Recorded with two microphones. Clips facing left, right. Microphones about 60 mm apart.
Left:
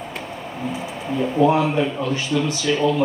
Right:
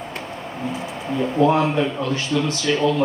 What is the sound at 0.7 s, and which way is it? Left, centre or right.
Speech, centre.